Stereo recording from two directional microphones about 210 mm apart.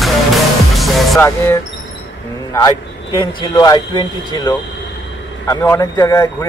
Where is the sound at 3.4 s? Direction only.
20° left (ahead or behind).